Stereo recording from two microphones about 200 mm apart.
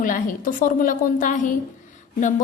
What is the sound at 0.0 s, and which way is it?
A woman's voice, 40° left (ahead or behind).